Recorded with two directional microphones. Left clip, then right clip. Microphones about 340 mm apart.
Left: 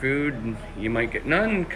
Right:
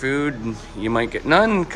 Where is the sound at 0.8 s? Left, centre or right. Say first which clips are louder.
Right 4 dB; right.